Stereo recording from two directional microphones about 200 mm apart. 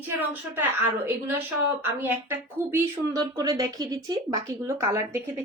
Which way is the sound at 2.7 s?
15° right (ahead or behind).